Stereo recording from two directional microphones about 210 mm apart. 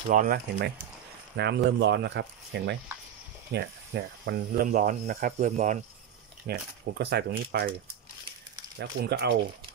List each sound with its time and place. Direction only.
0.1 s cricket: 40° right (ahead or behind)
1.3 s speech: 55° right (ahead or behind)
3.5 s cricket: 50° right (ahead or behind)
6.4 s speech: 50° right (ahead or behind)
8.7 s speech: 50° right (ahead or behind)